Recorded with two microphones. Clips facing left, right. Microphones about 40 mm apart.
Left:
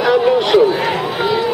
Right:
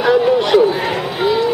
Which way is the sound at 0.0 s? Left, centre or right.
Centre.